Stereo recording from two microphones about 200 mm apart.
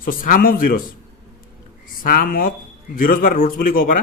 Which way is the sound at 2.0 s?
45° left (ahead or behind).